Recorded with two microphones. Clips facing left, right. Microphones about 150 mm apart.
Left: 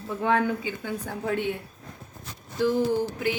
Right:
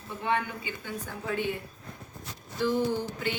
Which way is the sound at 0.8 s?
60° left (ahead or behind).